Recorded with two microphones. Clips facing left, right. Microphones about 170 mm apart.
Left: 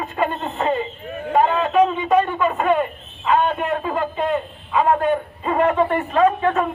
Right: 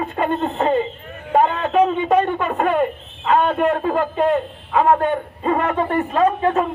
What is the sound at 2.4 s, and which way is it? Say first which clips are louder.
Speech: even; 55° right (ahead or behind).